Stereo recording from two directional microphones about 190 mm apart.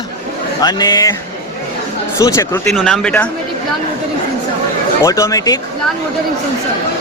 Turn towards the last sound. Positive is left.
turn(degrees=15)  # may be behind; listen again after turning